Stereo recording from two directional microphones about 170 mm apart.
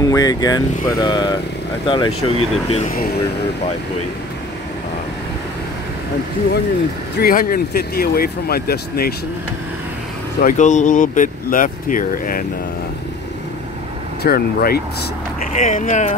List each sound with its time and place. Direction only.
0.0 s speech: 20° left (ahead or behind)
2.9 s speech: 60° left (ahead or behind)
7.2 s speech: 60° left (ahead or behind)
10.4 s speech: 45° left (ahead or behind)
14.2 s speech: 65° left (ahead or behind)
15.5 s speech: 45° left (ahead or behind)